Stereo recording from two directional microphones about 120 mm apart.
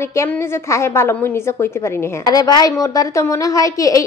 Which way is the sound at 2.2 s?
35° left (ahead or behind).